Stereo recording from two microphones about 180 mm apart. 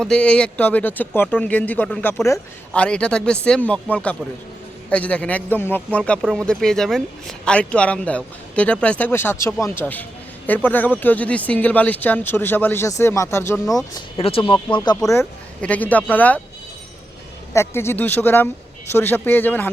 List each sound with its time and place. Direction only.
0.0 s a man's voice: 5° left (ahead or behind)
14.2 s speech: 30° left (ahead or behind)
15.1 s a man's voice: 10° left (ahead or behind)
17.5 s a man's voice: 15° left (ahead or behind)